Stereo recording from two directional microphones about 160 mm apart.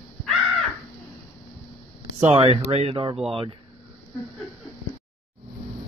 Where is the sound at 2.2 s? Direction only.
35° right (ahead or behind).